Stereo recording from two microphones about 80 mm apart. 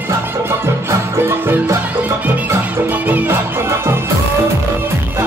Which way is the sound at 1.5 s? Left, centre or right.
Right.